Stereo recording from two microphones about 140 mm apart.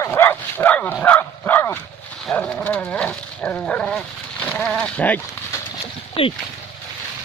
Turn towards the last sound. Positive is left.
turn(degrees=40)  # may be behind; listen again after turning